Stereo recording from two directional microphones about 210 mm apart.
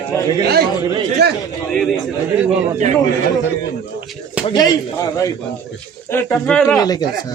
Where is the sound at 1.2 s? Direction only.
50° right (ahead or behind).